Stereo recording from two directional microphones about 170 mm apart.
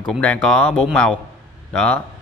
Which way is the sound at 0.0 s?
5° left (ahead or behind).